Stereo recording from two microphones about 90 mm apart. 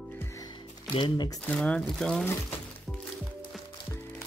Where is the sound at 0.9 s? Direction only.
70° left (ahead or behind).